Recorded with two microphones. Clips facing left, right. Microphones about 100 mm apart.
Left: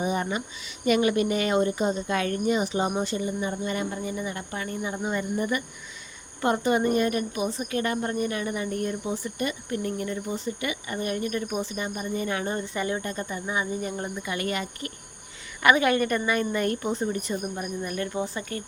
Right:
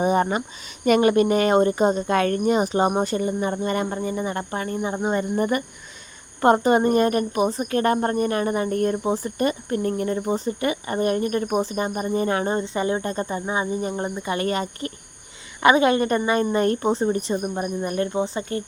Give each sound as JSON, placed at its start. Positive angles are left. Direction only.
{"t": 0.0, "sound": "speech", "side_deg": -45}
{"t": 5.4, "sound": "speech", "side_deg": -45}